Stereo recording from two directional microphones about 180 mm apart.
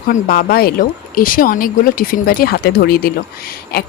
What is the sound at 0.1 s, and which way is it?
Speech, 55° left (ahead or behind).